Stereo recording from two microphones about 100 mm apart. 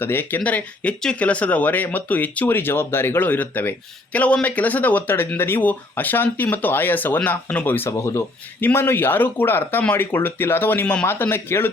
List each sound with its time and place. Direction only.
0.0 s speech: 20° left (ahead or behind)